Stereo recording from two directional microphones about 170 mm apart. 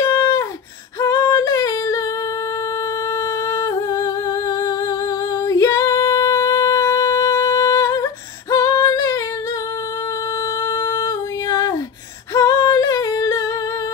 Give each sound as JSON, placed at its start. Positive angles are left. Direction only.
{"t": 0.1, "sound": "a sound", "side_deg": 15}
{"t": 1.0, "sound": "singing", "side_deg": 15}
{"t": 3.4, "sound": "humming", "side_deg": 20}
{"t": 5.4, "sound": "singing", "side_deg": 20}
{"t": 10.6, "sound": "music", "side_deg": 20}
{"t": 12.4, "sound": "singing", "side_deg": 20}